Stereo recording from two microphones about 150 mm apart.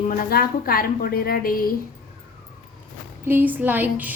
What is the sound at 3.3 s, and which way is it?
Speech, 15° right (ahead or behind).